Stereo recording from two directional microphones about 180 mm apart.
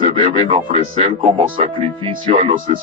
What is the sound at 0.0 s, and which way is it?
Speech, 30° right (ahead or behind).